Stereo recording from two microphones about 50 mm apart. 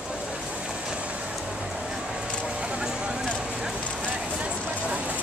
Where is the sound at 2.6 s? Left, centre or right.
Centre.